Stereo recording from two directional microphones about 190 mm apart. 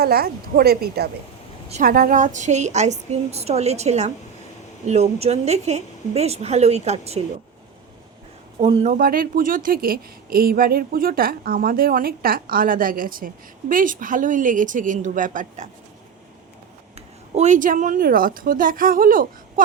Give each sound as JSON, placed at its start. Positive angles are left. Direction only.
{"t": 0.0, "sound": "a woman's voice", "side_deg": -55}
{"t": 8.6, "sound": "a woman's voice", "side_deg": -35}
{"t": 9.0, "sound": "speech", "side_deg": -50}
{"t": 17.3, "sound": "speech", "side_deg": -40}